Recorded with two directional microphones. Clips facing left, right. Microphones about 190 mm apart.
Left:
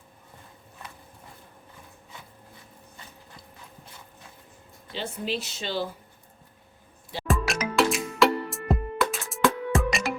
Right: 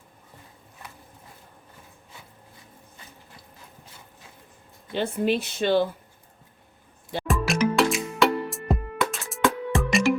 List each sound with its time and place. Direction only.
4.9 s speech: 55° right (ahead or behind)
7.3 s music: centre (ahead or behind)